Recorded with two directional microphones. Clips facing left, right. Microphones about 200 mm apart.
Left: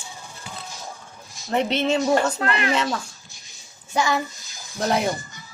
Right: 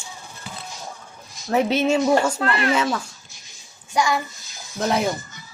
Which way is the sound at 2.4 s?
20° left (ahead or behind).